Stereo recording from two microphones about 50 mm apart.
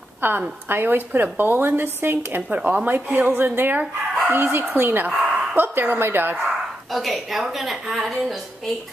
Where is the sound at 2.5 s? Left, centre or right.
Right.